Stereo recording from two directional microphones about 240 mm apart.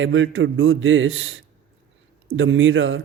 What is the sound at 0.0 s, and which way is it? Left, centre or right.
Speech, right.